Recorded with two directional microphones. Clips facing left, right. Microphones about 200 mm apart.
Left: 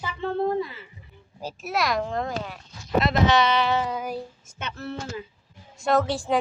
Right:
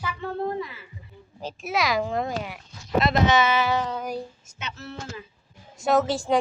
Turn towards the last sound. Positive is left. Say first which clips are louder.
# right 1 dB
turn(degrees=0)  # may be behind; listen again after turning